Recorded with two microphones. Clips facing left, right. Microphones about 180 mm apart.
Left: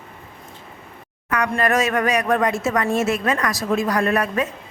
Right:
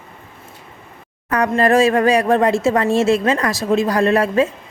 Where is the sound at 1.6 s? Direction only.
30° right (ahead or behind).